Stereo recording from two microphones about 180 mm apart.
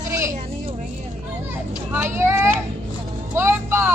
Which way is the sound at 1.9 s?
15° right (ahead or behind).